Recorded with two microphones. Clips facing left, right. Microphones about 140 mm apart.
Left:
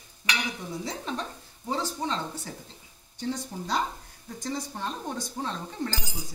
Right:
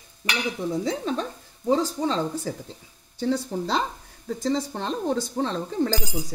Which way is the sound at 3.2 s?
90° right.